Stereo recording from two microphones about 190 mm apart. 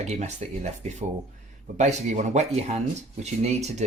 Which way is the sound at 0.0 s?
35° right (ahead or behind).